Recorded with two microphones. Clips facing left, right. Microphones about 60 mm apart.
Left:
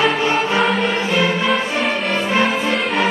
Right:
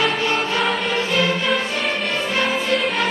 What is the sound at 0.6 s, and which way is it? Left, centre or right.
Music, centre.